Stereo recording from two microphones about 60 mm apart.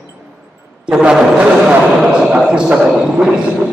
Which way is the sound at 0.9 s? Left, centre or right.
Centre.